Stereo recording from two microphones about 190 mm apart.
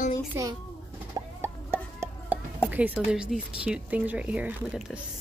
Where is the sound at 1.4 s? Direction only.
10° right (ahead or behind).